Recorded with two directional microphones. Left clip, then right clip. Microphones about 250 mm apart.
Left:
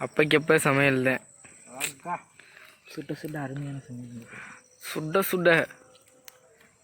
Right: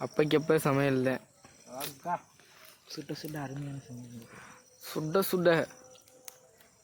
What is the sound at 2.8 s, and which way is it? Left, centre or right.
Speech, left.